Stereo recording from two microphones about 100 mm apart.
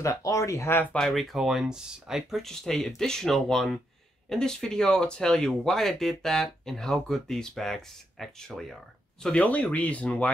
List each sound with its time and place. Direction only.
0.0 s speech: 35° left (ahead or behind)
0.9 s speech: 5° left (ahead or behind)